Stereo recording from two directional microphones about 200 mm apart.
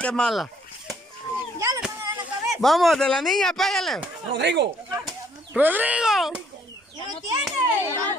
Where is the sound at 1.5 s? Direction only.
15° right (ahead or behind).